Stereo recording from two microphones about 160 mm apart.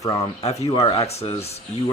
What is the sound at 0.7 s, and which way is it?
Speech, 40° left (ahead or behind).